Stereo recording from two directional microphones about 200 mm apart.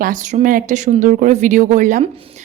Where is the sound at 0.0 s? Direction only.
40° right (ahead or behind).